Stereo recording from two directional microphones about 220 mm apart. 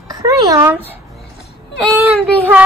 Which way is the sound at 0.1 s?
15° right (ahead or behind).